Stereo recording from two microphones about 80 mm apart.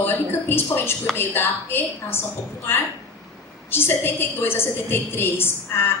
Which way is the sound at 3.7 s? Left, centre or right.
Left.